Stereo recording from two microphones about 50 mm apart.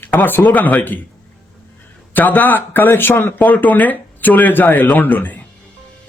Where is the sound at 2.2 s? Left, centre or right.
Left.